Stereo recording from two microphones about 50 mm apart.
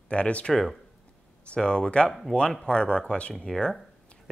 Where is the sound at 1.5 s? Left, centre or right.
Centre.